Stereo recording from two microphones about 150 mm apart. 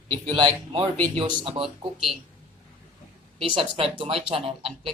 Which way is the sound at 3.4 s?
35° right (ahead or behind).